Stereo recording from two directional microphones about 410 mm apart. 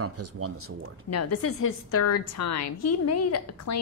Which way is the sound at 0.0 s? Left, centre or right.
Right.